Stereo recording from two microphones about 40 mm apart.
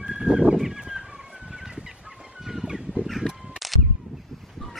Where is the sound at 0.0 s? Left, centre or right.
Centre.